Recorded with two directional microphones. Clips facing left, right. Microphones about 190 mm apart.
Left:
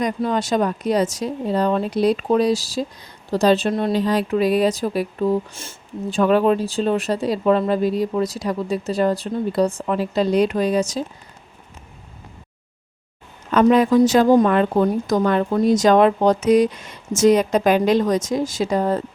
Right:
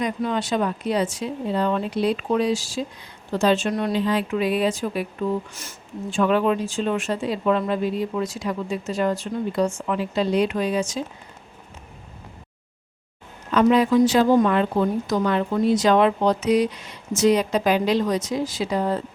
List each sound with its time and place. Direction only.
0.0 s speech: 40° left (ahead or behind)
4.0 s speech: 40° left (ahead or behind)
13.5 s a woman's voice: 50° left (ahead or behind)